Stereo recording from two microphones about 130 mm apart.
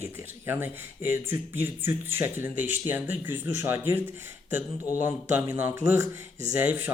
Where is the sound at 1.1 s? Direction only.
15° right (ahead or behind).